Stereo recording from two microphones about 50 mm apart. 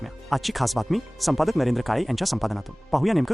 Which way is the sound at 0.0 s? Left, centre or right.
Centre.